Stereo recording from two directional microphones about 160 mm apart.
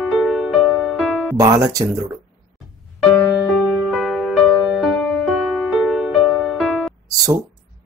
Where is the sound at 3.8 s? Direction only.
Centre (ahead or behind).